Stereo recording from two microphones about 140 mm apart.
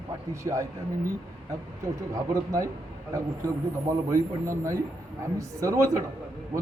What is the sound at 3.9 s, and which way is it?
Speech, 20° right (ahead or behind).